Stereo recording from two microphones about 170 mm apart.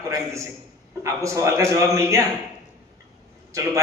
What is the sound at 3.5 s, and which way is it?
Speech, 15° right (ahead or behind).